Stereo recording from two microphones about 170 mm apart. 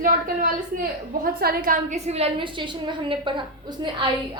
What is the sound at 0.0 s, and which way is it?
A woman's voice, 50° right (ahead or behind).